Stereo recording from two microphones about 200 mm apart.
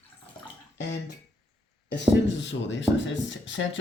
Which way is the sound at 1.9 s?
65° left (ahead or behind).